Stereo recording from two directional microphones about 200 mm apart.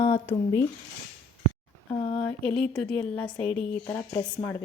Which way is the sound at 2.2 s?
5° left (ahead or behind).